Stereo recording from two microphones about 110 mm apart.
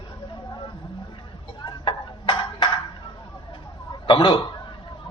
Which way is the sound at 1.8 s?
45° left (ahead or behind).